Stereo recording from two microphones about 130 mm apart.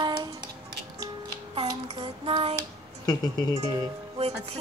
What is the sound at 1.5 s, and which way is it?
Child singing, 50° right (ahead or behind).